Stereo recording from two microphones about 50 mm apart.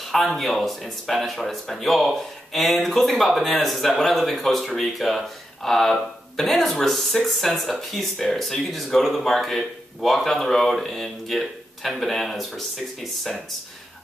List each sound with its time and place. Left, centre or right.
0.0 s speech: centre